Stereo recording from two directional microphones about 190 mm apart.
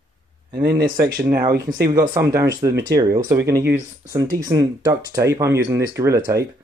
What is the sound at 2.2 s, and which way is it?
Speech, 15° right (ahead or behind).